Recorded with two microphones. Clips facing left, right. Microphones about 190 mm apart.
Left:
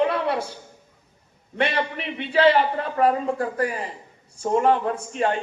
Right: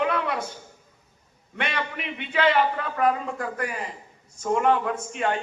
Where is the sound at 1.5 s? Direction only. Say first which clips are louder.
Left 6 dB; 30° left (ahead or behind).